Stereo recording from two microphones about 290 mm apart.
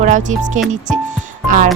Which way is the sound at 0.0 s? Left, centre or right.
Right.